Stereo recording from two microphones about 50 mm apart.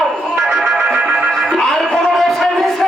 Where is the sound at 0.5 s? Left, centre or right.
Centre.